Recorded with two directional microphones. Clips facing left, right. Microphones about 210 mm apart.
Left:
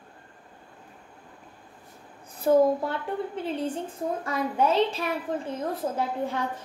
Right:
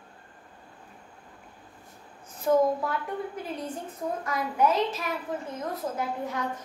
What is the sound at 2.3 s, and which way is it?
A woman's voice, 30° left (ahead or behind).